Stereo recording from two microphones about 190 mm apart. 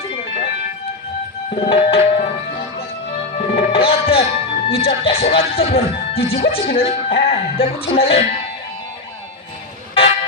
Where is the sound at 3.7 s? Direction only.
30° left (ahead or behind).